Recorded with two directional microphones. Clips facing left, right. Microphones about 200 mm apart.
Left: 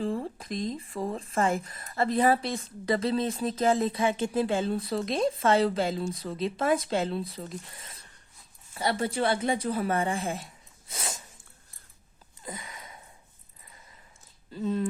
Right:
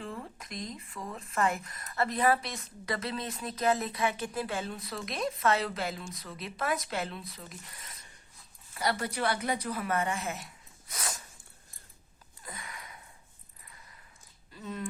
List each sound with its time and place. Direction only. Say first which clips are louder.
0.0 s a woman's voice: left 10 dB; 30° left (ahead or behind)
12.4 s sniff: left 4 dB; 20° left (ahead or behind)
14.5 s speech: left 10 dB; 30° left (ahead or behind)